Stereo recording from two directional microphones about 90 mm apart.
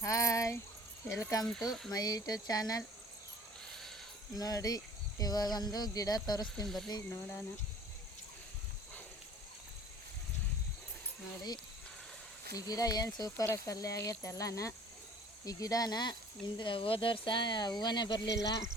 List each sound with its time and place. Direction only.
0.0 s speech: 35° left (ahead or behind)
1.5 s speech: centre (ahead or behind)
1.9 s speech: 45° left (ahead or behind)
4.4 s speech: 45° left (ahead or behind)
6.7 s speech: centre (ahead or behind)
7.1 s speech: 35° left (ahead or behind)
12.5 s speech: 45° left (ahead or behind)
13.3 s speech: 30° left (ahead or behind); by 16.1 s 50° left (ahead or behind)
16.6 s speech: 75° left (ahead or behind); by 18.6 s 45° left (ahead or behind)